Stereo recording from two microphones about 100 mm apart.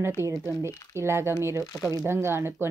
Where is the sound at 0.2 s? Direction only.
30° right (ahead or behind).